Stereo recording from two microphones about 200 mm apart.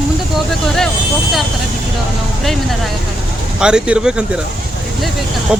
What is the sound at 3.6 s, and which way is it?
Speech, 5° right (ahead or behind).